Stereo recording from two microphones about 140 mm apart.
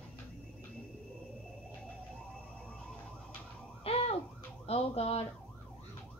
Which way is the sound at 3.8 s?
45° left (ahead or behind).